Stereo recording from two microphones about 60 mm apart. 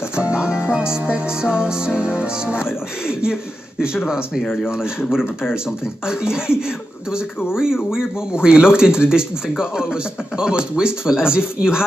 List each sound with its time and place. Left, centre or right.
0.1 s music: centre
2.0 s speech: centre
6.0 s speech: centre
7.5 s speech: centre
10.3 s speech: centre